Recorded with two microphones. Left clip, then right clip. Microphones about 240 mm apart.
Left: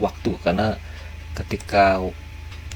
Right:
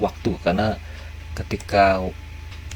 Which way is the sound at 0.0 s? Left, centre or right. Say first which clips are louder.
Even; right.